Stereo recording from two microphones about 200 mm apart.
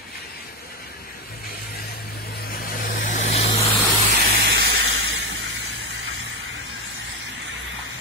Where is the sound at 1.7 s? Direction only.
50° left (ahead or behind); by 3.7 s 30° left (ahead or behind).